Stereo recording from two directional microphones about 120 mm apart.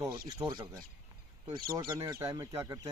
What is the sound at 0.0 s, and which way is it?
Speech, 30° right (ahead or behind).